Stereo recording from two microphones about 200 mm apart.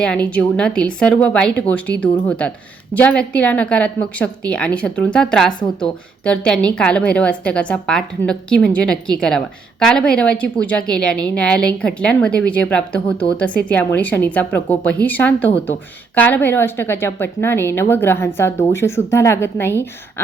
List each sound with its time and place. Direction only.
0.0 s a woman's voice: 5° left (ahead or behind)